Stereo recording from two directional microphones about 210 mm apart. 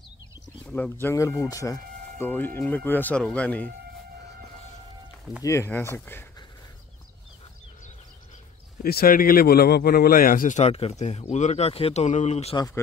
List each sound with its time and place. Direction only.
0.7 s speech: 5° left (ahead or behind)
5.4 s speech: 15° left (ahead or behind)
8.8 s speech: 45° left (ahead or behind)